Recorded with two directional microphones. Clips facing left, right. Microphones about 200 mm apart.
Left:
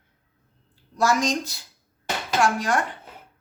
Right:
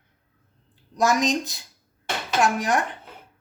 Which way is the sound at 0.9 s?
20° right (ahead or behind).